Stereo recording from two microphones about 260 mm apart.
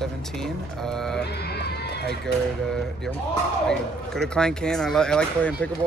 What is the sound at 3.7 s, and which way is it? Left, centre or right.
Speech, centre.